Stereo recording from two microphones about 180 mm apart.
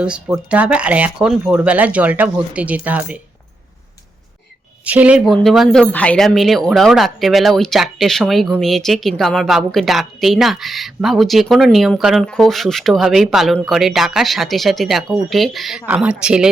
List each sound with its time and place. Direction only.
0.0 s speech: 5° right (ahead or behind)
4.9 s a woman's voice: 5° right (ahead or behind)